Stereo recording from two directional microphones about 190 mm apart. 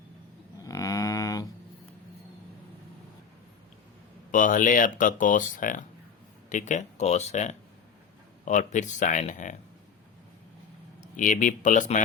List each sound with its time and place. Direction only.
0.6 s a sound: 20° left (ahead or behind)
4.3 s speech: 45° left (ahead or behind)
11.0 s speech: 45° left (ahead or behind)